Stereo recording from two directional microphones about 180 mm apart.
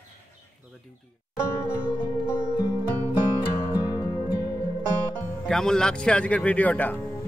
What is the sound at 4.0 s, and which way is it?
Music, 20° left (ahead or behind).